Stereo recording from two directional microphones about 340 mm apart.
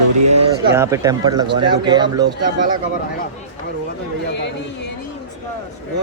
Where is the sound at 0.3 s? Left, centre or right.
Centre.